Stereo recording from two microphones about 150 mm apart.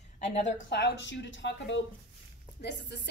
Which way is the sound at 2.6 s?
90° left.